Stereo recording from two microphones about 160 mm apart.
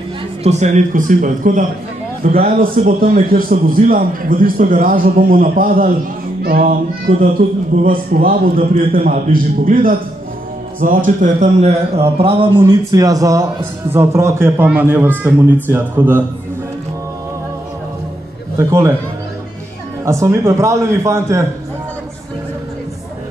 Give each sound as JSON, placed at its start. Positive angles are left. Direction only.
{"t": 0.4, "sound": "speech", "side_deg": -45}
{"t": 12.6, "sound": "a man's voice", "side_deg": -20}
{"t": 18.6, "sound": "a man's voice", "side_deg": -15}
{"t": 20.1, "sound": "a man's voice", "side_deg": -20}